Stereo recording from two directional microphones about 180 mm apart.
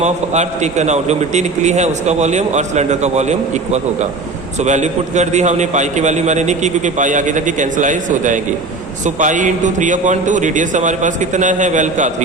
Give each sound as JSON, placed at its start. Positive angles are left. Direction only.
{"t": 0.0, "sound": "a man's voice", "side_deg": -40}